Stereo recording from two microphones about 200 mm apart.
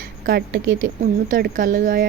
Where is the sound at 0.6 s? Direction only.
80° right.